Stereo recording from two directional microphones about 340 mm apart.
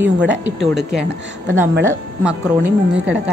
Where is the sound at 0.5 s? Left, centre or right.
Centre.